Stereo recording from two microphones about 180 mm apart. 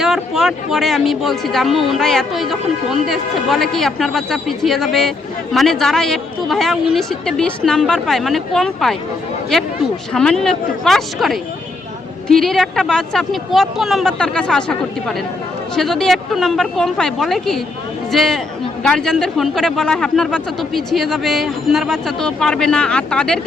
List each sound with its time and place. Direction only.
0.0 s speech: centre (ahead or behind)
10.1 s speech: 5° left (ahead or behind)